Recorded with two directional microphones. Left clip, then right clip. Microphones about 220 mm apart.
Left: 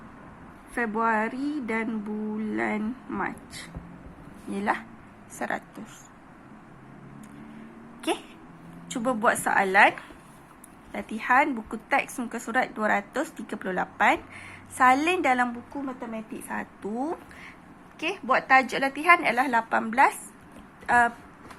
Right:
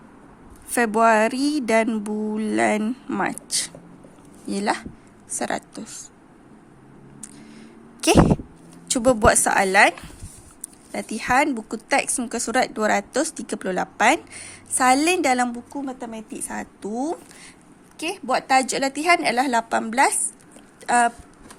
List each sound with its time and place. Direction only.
0.7 s speech: 65° right (ahead or behind)
4.5 s a woman's voice: 50° right (ahead or behind)
8.9 s a woman's voice: 55° right (ahead or behind)
11.1 s a woman's voice: 50° right (ahead or behind)